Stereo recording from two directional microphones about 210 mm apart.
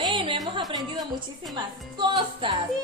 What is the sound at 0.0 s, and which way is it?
Music, 25° right (ahead or behind).